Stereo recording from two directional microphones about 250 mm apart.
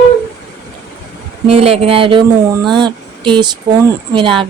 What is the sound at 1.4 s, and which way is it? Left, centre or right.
A woman's voice, right.